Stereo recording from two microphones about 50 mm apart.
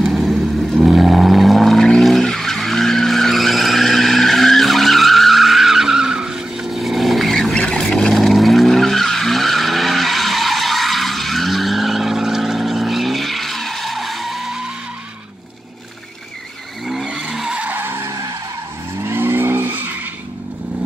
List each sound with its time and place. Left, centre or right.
0.0 s vehicle: centre
16.8 s vehicle: centre
17.3 s skidding: centre
17.7 s skidding: right
19.0 s vehicle: right